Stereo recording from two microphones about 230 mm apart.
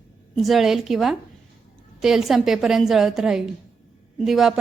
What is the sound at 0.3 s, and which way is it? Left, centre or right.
A woman's voice, centre.